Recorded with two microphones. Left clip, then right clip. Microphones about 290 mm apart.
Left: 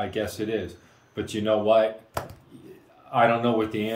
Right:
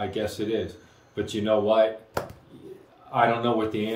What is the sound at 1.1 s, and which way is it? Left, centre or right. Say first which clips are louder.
Speech: even; centre.